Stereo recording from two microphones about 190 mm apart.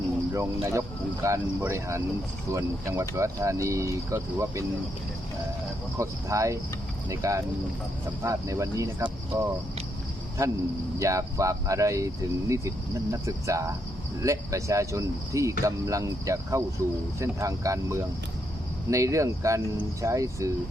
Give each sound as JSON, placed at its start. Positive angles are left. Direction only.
{"t": 0.3, "sound": "speech", "side_deg": -15}
{"t": 6.0, "sound": "speech", "side_deg": -15}
{"t": 10.9, "sound": "speech", "side_deg": -15}